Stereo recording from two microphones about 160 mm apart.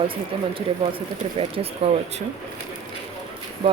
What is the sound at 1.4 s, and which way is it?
Speech, 40° right (ahead or behind).